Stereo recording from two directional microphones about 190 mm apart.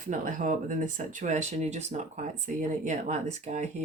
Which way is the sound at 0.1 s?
45° right (ahead or behind).